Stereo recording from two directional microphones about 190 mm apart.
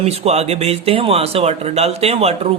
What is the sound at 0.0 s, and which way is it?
Speech, 35° right (ahead or behind).